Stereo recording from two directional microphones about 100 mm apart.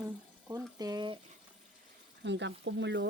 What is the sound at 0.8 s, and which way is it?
Speech, 40° right (ahead or behind).